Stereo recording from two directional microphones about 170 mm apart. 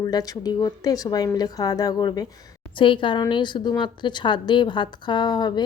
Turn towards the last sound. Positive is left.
turn(degrees=25)  # may be behind; listen again after turning